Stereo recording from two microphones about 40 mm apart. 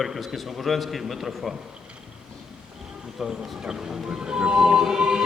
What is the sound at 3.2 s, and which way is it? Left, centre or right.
Speech, centre.